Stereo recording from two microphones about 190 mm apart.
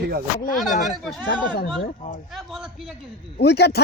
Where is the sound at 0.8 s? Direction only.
Centre (ahead or behind).